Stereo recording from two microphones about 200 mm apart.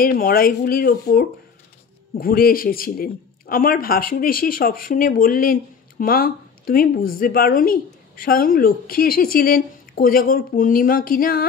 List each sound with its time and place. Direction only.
0.0 s a man's voice: 45° left (ahead or behind)